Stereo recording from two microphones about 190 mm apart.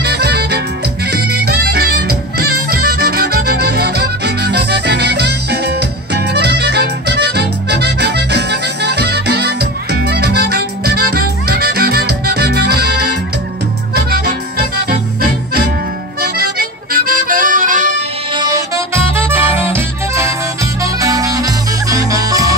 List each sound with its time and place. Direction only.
0.0 s music: 60° right (ahead or behind)
16.2 s music: 55° right (ahead or behind)
18.3 s music: 20° right (ahead or behind)